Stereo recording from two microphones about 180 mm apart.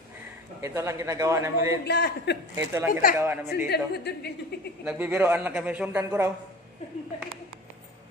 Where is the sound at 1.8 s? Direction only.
65° left (ahead or behind).